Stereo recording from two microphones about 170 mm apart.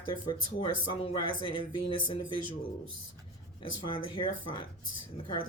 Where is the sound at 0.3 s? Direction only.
30° left (ahead or behind).